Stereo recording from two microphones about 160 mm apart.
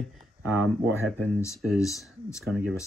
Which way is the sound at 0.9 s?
15° left (ahead or behind).